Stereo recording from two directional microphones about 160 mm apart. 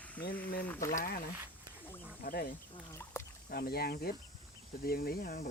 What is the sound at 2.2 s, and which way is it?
Speech, 70° left (ahead or behind).